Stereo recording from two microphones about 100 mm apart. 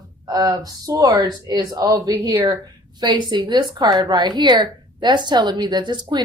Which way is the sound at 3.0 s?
45° right (ahead or behind).